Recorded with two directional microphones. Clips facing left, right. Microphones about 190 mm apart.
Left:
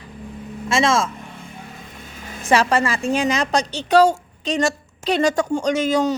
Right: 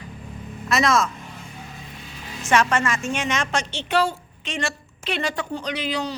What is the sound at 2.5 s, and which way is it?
A woman's voice, 30° left (ahead or behind).